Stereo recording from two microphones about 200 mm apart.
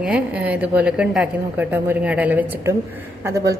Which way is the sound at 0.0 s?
5° right (ahead or behind).